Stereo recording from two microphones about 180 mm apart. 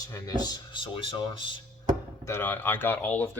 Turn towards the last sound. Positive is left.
turn(degrees=10)  # may be behind; listen again after turning